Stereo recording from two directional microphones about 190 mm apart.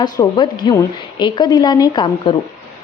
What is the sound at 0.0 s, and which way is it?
A woman's voice, 25° left (ahead or behind).